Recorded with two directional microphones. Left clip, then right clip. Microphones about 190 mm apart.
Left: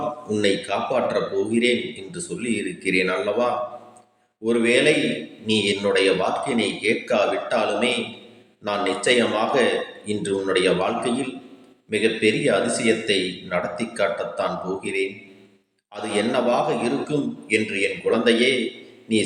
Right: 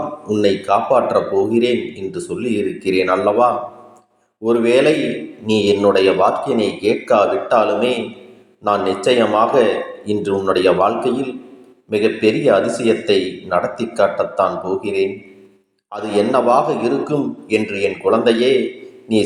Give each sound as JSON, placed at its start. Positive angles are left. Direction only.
{"t": 0.3, "sound": "a man's voice", "side_deg": -10}